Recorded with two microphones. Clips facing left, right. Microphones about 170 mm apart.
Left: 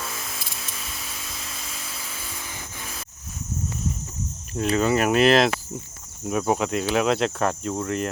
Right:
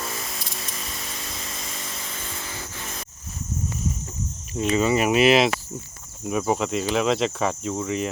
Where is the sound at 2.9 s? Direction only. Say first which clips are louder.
Right 2 dB; centre (ahead or behind).